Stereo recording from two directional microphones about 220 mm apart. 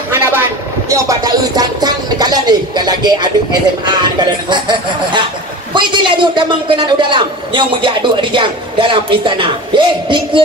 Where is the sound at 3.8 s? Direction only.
20° right (ahead or behind).